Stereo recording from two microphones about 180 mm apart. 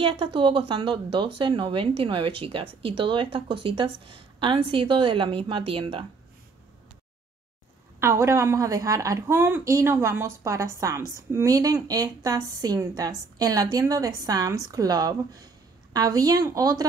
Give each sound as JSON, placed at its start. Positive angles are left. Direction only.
{"t": 0.0, "sound": "a woman's voice", "side_deg": -30}
{"t": 8.0, "sound": "a woman's voice", "side_deg": -15}